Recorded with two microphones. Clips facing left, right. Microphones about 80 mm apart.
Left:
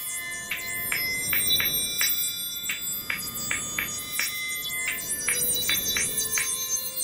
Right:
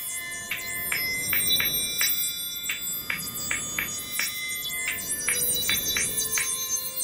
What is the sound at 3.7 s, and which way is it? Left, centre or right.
Music, centre.